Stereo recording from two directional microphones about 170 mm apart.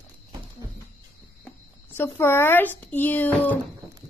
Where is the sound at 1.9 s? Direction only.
15° left (ahead or behind).